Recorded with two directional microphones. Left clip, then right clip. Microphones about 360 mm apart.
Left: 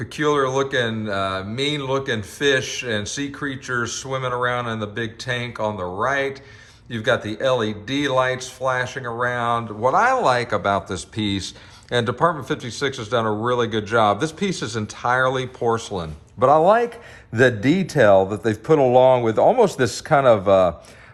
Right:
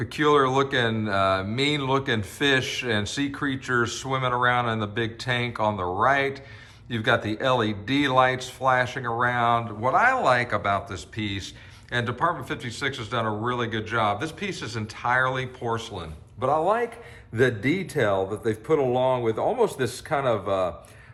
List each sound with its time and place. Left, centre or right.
0.0 s a man's voice: centre; by 20.7 s left